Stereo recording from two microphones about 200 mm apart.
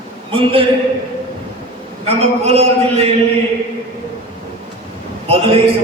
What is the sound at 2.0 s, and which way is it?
A man's voice, 30° right (ahead or behind).